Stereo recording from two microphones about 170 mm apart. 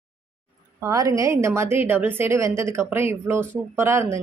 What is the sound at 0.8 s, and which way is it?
A woman's voice, 20° right (ahead or behind).